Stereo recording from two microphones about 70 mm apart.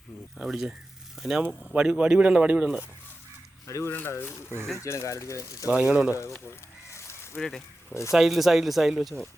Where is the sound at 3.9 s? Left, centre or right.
Left.